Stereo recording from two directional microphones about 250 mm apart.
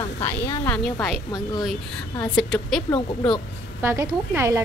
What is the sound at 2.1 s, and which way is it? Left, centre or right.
A woman's voice, centre.